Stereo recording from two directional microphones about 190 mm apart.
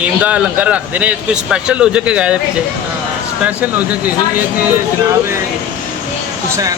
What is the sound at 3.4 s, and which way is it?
Speech, 10° right (ahead or behind).